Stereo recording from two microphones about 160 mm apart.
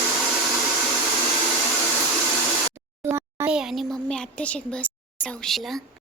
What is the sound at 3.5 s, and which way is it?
A woman's voice, centre (ahead or behind).